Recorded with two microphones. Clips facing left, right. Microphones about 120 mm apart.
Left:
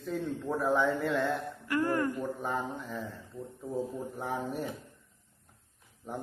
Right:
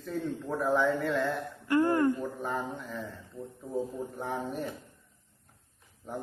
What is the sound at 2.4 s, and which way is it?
A man's voice, centre (ahead or behind).